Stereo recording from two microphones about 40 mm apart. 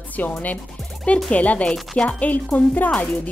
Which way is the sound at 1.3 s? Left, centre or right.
Left.